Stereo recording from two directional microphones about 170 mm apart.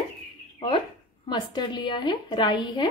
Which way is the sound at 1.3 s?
25° left (ahead or behind).